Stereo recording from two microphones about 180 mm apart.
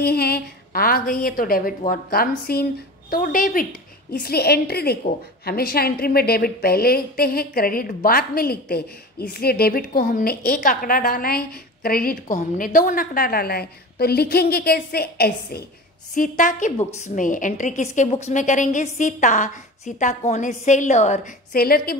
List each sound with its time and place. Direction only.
0.0 s a woman's voice: 60° left (ahead or behind)
16.2 s a woman's voice: 45° left (ahead or behind)
21.5 s a woman's voice: 55° left (ahead or behind)